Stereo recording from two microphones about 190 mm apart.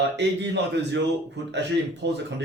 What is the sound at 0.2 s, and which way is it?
Speech, 65° right (ahead or behind).